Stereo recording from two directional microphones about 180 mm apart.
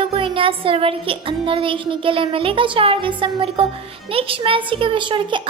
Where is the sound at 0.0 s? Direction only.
30° right (ahead or behind).